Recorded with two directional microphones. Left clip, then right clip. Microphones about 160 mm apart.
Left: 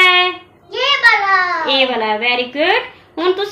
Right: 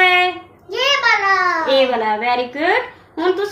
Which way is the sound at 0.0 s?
25° left (ahead or behind).